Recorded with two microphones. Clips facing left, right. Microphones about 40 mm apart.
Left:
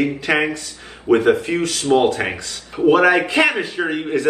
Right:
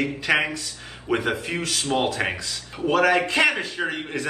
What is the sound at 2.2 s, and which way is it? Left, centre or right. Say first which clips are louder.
Speech: left 3 dB; left.